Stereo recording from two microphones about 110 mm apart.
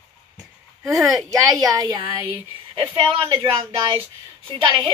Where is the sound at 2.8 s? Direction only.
50° right (ahead or behind).